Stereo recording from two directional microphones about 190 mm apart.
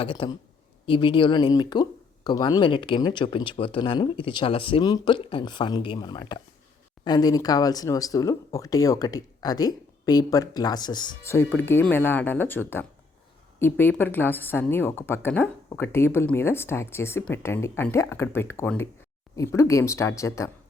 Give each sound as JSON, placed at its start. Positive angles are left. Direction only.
{"t": 0.0, "sound": "speech", "side_deg": 25}
{"t": 11.3, "sound": "speech", "side_deg": 10}